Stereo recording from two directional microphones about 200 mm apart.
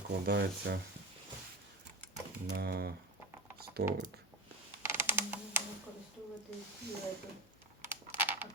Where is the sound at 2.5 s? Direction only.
50° right (ahead or behind).